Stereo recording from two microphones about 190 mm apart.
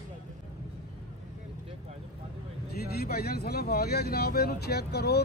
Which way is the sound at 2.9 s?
55° left (ahead or behind).